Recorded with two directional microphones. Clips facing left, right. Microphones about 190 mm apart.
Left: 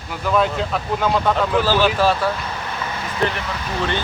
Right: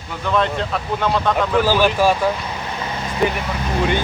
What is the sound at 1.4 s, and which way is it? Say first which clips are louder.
Speech: right 1 dB; 10° right (ahead or behind).